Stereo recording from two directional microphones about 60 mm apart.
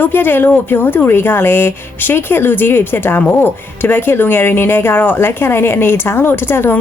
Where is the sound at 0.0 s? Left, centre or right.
Left.